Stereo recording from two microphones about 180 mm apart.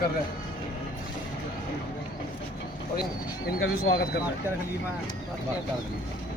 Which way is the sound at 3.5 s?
60° left (ahead or behind).